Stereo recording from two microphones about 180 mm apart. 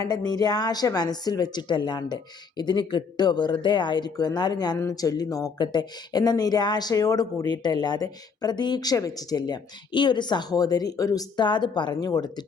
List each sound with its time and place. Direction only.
0.0 s speech: 20° left (ahead or behind)